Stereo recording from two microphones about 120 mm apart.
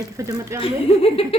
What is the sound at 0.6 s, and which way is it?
Speech, 50° left (ahead or behind).